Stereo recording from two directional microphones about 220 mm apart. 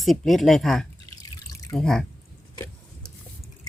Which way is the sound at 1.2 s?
15° left (ahead or behind).